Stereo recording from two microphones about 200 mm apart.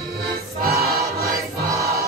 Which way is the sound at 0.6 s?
50° right (ahead or behind).